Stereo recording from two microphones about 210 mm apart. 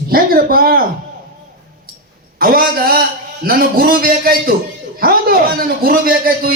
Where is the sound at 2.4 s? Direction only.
45° right (ahead or behind).